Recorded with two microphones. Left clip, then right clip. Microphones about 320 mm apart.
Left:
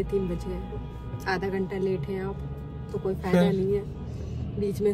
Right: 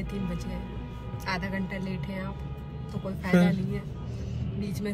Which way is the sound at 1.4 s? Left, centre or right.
Centre.